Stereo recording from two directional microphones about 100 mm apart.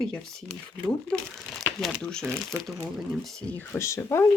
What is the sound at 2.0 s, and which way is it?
Speech, 5° left (ahead or behind).